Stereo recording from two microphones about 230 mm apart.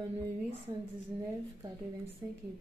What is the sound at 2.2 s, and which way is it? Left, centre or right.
Speech, centre.